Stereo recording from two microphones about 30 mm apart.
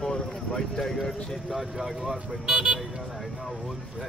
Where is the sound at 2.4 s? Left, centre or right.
Right.